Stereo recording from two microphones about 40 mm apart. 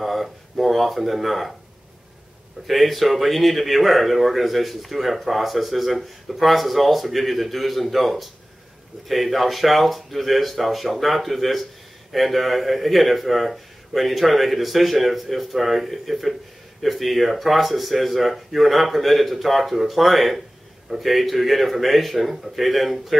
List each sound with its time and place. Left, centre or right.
0.0 s speech: centre
2.6 s speech: centre